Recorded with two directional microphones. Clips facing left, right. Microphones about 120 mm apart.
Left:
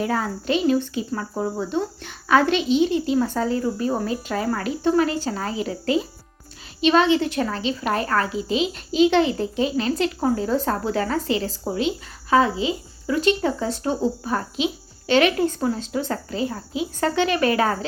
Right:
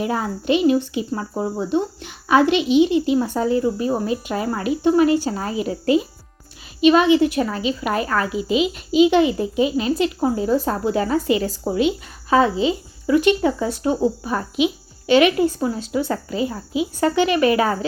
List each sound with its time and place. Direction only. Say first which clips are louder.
0.0 s speech: right 1 dB; 15° right (ahead or behind)
5.8 s speech: right 5 dB; 30° left (ahead or behind)
6.8 s speech: right 4 dB; 10° right (ahead or behind)